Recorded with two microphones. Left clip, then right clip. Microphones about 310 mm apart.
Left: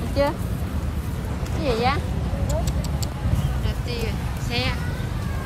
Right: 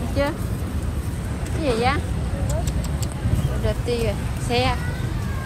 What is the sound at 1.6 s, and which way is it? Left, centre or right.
Speech, centre.